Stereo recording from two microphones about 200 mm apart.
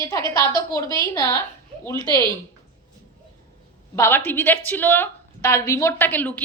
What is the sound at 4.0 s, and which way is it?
Speech, 10° left (ahead or behind).